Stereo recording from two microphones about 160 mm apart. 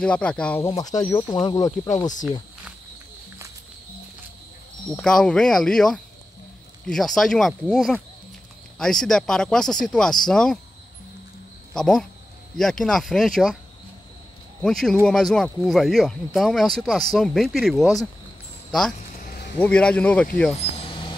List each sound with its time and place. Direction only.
0.0 s speech: 5° left (ahead or behind)
0.7 s speech: 25° left (ahead or behind)
4.9 s speech: 5° left (ahead or behind)
11.7 s speech: 5° left (ahead or behind)
14.6 s speech: 5° left (ahead or behind)
19.2 s a sound: 80° left
19.6 s speech: 5° left (ahead or behind)
20.5 s a sound: 35° left (ahead or behind)